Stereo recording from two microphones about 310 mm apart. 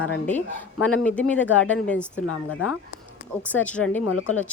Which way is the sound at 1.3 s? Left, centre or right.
Centre.